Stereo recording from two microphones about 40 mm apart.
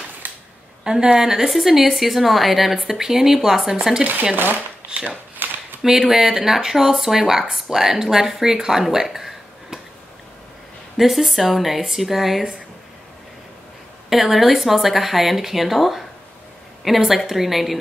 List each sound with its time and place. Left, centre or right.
0.2 s a sound: right
0.8 s speech: centre
4.0 s speech: right
4.9 s speech: right
5.4 s a sound: right
5.8 s speech: centre
11.0 s speech: centre
14.0 s speech: centre